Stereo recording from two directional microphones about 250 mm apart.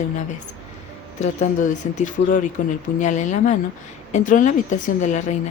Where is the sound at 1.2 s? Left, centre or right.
Left.